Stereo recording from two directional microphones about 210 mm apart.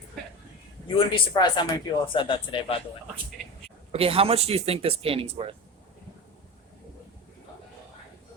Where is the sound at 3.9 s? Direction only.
25° right (ahead or behind).